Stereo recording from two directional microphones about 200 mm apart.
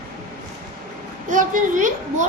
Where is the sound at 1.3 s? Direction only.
40° right (ahead or behind).